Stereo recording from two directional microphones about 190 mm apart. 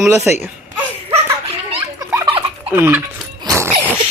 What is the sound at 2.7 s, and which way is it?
Speech, 10° right (ahead or behind).